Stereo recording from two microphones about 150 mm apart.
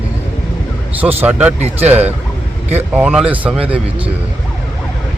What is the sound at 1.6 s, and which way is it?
Speech, 45° right (ahead or behind).